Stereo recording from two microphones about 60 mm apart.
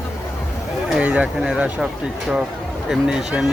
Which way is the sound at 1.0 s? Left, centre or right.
Right.